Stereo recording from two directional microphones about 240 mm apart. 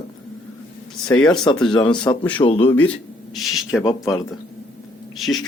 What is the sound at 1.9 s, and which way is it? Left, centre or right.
Speech, centre.